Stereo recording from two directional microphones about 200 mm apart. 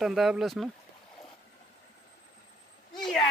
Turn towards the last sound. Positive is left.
turn(degrees=0)  # may be behind; listen again after turning